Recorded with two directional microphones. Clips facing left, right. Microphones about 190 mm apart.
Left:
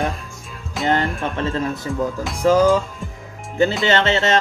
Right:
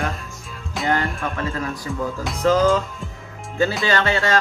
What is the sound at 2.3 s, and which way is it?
Speech, 10° left (ahead or behind).